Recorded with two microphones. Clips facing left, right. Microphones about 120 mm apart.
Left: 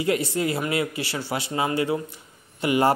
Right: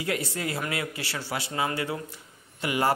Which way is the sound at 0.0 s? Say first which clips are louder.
Left 7 dB; 20° left (ahead or behind).